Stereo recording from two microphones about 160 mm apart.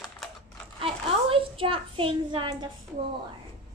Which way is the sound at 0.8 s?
35° right (ahead or behind).